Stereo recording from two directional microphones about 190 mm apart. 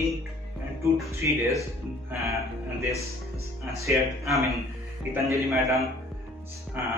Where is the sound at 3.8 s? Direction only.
15° right (ahead or behind).